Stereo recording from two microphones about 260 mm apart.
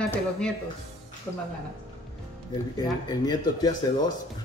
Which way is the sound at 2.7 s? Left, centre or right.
Centre.